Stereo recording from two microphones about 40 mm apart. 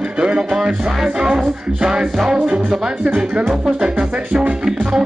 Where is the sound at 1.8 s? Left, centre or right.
Right.